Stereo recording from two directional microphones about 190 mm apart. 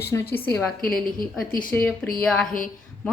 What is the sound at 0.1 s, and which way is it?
Speech, 10° left (ahead or behind).